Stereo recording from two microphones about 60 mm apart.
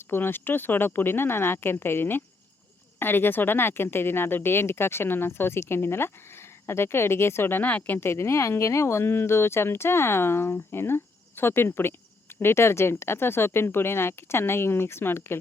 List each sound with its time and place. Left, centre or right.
0.1 s speech: left
7.9 s speech: left